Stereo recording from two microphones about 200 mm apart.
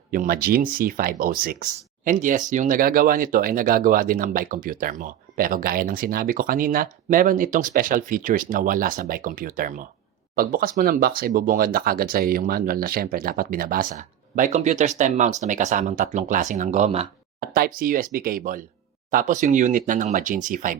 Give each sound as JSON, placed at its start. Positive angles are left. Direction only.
{"t": 0.1, "sound": "speech", "side_deg": -45}
{"t": 17.4, "sound": "a sound", "side_deg": -50}
{"t": 17.7, "sound": "speech", "side_deg": -45}